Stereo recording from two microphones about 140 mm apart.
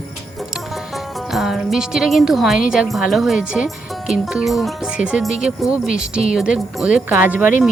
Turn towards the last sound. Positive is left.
turn(degrees=-10)  # may be behind; listen again after turning